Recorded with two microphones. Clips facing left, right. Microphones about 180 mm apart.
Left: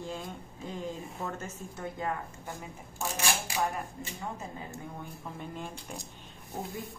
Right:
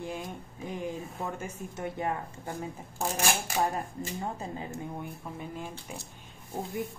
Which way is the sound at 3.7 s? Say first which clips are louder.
Right 4 dB; 30° right (ahead or behind).